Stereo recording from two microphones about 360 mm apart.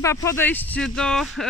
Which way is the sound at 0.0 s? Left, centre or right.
Centre.